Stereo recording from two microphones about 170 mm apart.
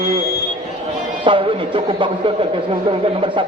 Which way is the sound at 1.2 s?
30° right (ahead or behind).